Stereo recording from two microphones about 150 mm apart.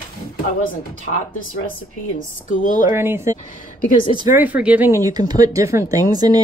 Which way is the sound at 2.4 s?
60° left (ahead or behind).